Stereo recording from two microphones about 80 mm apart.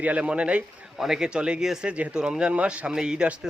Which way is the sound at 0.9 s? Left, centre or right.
Centre.